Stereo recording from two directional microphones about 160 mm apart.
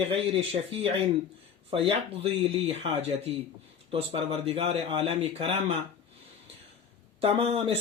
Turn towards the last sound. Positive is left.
turn(degrees=-40)  # may be behind; listen again after turning